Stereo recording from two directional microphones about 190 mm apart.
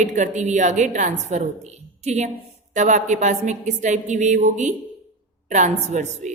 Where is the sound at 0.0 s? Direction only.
40° right (ahead or behind).